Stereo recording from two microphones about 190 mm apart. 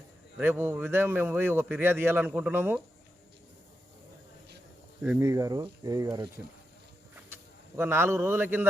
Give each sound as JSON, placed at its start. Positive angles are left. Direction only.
{"t": 0.3, "sound": "speech", "side_deg": -10}
{"t": 5.0, "sound": "speech", "side_deg": -15}
{"t": 7.8, "sound": "speech", "side_deg": -15}